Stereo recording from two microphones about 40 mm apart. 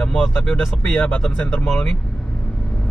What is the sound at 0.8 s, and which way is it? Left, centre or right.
Speech, left.